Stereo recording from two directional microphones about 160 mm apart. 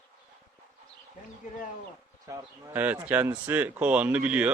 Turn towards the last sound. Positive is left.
turn(degrees=-10)  # may be behind; listen again after turning